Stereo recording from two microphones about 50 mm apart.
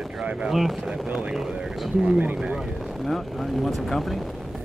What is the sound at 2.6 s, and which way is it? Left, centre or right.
Speech, centre.